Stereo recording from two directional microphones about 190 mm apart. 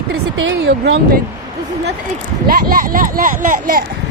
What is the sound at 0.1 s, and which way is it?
Speech, 85° right.